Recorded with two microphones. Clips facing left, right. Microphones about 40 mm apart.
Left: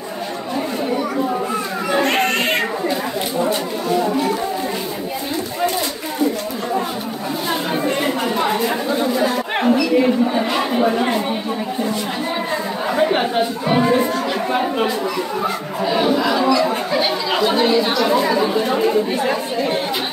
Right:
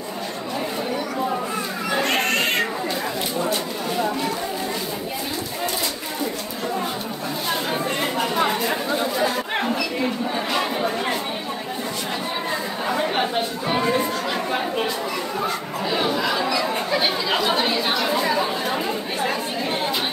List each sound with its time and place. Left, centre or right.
1.9 s cat: centre
9.2 s chatter: centre
12.9 s chatter: centre
15.4 s speech: centre